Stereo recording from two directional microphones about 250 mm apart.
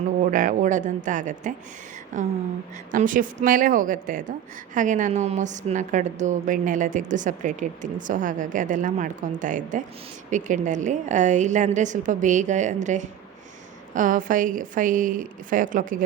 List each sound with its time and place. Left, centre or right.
0.3 s a woman's voice: right